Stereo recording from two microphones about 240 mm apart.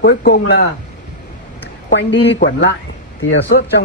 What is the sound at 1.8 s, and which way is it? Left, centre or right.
Speech, left.